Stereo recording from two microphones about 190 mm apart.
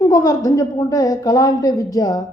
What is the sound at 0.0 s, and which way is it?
Speech, 15° left (ahead or behind).